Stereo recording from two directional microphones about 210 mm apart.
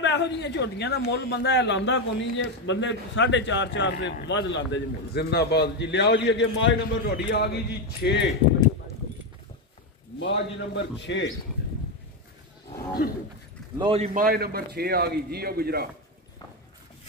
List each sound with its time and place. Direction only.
0.0 s a man's voice: 55° left (ahead or behind)
10.1 s a man's voice: 60° left (ahead or behind)
13.7 s a man's voice: 25° right (ahead or behind)
14.2 s speech: 45° right (ahead or behind)